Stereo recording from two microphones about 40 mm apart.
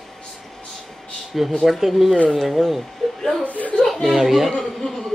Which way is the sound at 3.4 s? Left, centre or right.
Left.